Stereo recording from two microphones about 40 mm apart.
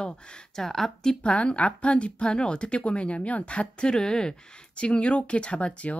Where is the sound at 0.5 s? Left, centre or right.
Centre.